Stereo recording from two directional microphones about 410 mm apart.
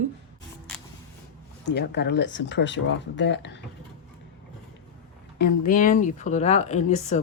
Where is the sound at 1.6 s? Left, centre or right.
Left.